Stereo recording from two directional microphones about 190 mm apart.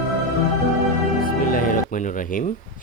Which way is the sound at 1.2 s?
50° left (ahead or behind).